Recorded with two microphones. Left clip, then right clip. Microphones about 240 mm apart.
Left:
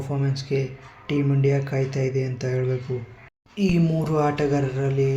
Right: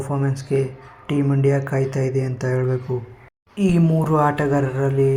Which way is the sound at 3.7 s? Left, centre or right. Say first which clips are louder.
Right 5 dB; centre.